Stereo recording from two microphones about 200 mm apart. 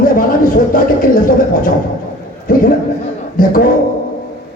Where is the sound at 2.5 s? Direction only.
45° left (ahead or behind).